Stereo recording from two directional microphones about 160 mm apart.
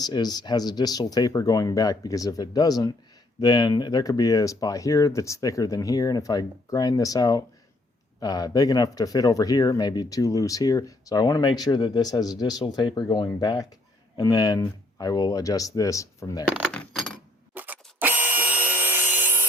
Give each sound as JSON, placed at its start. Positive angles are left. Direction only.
{"t": 0.0, "sound": "speech", "side_deg": 25}
{"t": 16.7, "sound": "coin", "side_deg": 5}
{"t": 17.5, "sound": "wood", "side_deg": -10}